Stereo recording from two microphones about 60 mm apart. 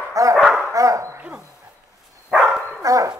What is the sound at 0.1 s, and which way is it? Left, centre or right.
Dog, right.